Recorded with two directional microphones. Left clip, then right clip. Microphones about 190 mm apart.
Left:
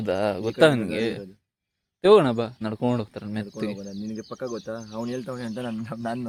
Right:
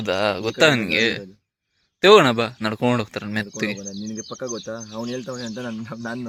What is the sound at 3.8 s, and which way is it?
Speech, 25° right (ahead or behind).